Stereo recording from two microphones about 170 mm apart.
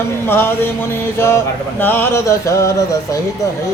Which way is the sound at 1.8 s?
10° left (ahead or behind).